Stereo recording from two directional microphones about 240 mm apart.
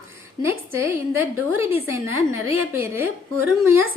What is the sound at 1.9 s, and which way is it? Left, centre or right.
A woman's voice, centre.